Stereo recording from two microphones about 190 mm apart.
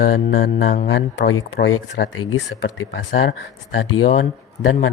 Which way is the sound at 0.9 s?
60° left (ahead or behind).